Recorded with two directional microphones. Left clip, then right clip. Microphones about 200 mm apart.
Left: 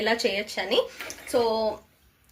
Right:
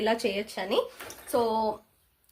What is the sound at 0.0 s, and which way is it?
A woman's voice, 50° right (ahead or behind).